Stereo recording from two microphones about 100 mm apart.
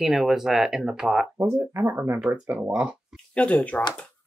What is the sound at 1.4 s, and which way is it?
Speech, 25° right (ahead or behind).